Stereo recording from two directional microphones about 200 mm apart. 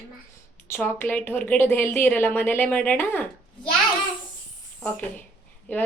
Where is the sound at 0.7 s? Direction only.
10° left (ahead or behind).